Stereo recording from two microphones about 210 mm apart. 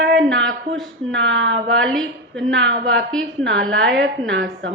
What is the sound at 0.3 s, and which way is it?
Speech, 65° right (ahead or behind).